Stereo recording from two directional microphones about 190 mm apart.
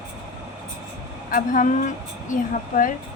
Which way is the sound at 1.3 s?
45° left (ahead or behind).